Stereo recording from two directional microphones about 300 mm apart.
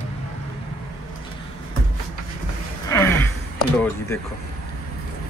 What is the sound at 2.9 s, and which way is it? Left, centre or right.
Gasp, centre.